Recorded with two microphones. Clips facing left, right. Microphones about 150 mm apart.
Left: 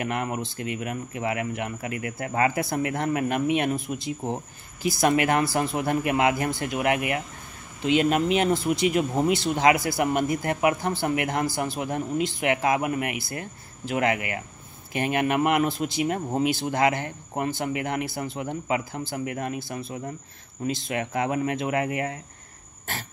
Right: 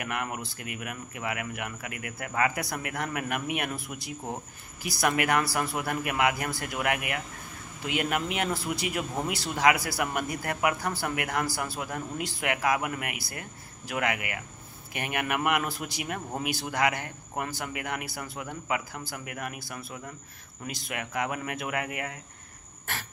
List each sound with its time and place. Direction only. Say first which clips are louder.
0.0 s speech: left 5 dB; 30° left (ahead or behind)